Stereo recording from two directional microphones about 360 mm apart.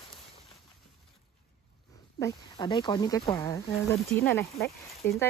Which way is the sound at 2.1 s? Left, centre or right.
Centre.